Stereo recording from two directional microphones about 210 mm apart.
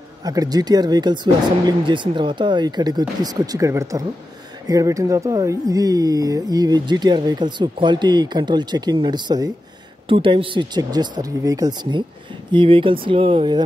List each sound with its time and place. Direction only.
0.2 s speech: 15° right (ahead or behind)